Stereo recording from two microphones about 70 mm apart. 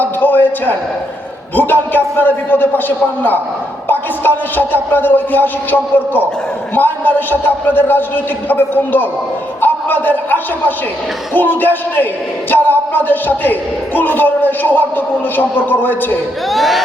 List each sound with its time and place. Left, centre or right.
0.0 s a sound: left
1.5 s speech: left
3.8 s a man's voice: left
16.5 s speech: centre